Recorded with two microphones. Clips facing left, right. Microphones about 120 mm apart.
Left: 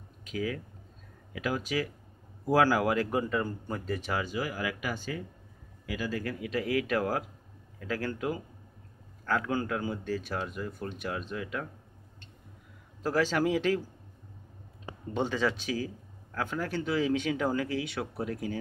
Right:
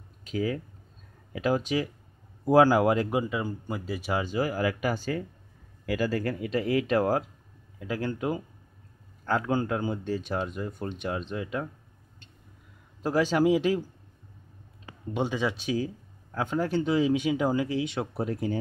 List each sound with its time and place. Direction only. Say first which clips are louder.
0.2 s speech: right 4 dB; 30° right (ahead or behind)
3.1 s speech: right 1 dB; 10° right (ahead or behind)
4.1 s speech: right 7 dB; 30° right (ahead or behind)
5.9 s speech: right 6 dB; 50° right (ahead or behind); by 11.6 s 25° right (ahead or behind)
13.0 s speech: right 4 dB; 15° right (ahead or behind)
15.1 s speech: right 1 dB; 15° right (ahead or behind)